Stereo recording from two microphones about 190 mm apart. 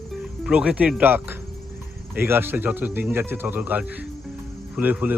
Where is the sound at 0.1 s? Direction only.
5° right (ahead or behind).